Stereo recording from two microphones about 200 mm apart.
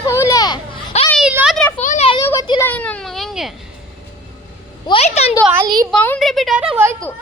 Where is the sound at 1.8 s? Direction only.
40° left (ahead or behind).